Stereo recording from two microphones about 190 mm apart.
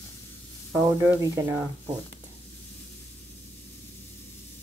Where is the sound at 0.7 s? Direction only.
15° right (ahead or behind).